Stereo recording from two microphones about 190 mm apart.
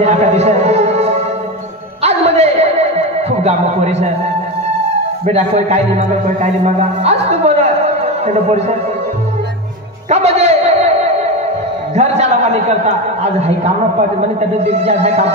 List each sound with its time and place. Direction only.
0.0 s a sound: 35° right (ahead or behind)
2.0 s music: 35° right (ahead or behind)
5.2 s a man's voice: 35° right (ahead or behind)
10.0 s a sound: 35° right (ahead or behind)
11.9 s a man's voice: 35° right (ahead or behind)
14.7 s speech: 35° right (ahead or behind)